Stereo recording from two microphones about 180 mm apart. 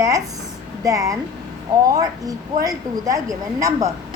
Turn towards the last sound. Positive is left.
turn(degrees=-20)  # may be behind; listen again after turning